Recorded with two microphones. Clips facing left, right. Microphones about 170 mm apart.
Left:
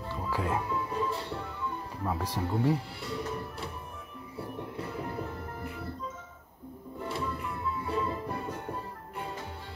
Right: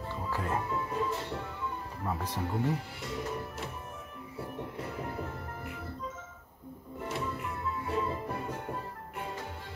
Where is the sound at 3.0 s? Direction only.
20° right (ahead or behind).